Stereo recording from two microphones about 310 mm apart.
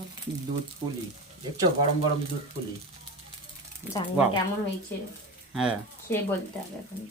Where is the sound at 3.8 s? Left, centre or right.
Centre.